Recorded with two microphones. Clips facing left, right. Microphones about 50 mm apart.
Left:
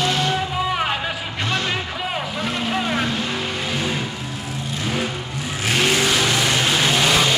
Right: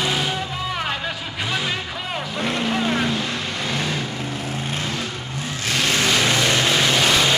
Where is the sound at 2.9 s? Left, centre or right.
Centre.